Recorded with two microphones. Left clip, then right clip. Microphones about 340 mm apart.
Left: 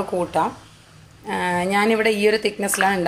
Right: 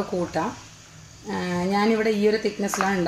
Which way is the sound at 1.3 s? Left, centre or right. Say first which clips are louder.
Left 5 dB; left.